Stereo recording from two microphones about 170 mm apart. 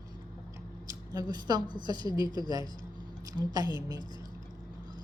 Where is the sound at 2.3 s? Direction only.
25° left (ahead or behind).